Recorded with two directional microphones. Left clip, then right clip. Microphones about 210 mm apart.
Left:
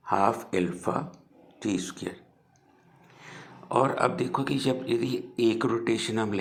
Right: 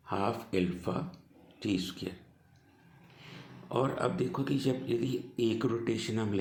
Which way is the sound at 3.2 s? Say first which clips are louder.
Left 6 dB; 15° left (ahead or behind).